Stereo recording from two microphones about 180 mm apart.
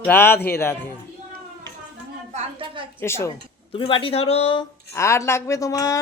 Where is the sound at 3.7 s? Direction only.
30° left (ahead or behind).